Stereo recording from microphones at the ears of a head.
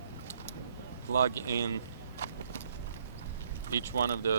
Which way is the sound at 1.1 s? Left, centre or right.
Right.